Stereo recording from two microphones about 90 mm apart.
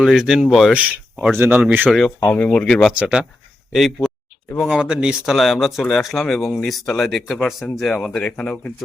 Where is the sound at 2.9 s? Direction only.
10° right (ahead or behind); by 8.7 s 15° left (ahead or behind).